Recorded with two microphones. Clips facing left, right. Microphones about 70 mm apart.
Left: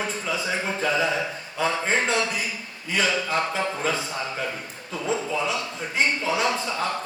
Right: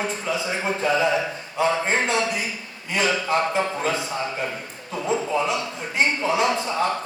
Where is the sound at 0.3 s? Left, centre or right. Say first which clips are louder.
Right 2 dB; right.